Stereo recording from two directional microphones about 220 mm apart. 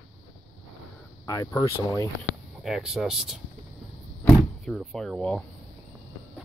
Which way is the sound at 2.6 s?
Centre (ahead or behind).